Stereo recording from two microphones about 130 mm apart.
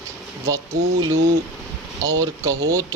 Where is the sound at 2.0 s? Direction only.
30° right (ahead or behind).